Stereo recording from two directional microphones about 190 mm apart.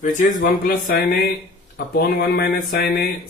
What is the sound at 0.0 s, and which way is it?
Speech, 45° left (ahead or behind).